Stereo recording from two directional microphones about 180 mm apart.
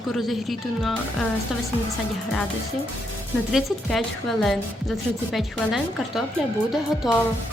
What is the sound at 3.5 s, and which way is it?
A woman's voice, centre (ahead or behind).